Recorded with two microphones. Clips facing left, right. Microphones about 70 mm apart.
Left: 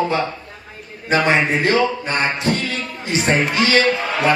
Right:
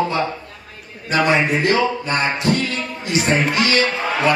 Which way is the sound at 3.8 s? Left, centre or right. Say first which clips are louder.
Left 1 dB; right.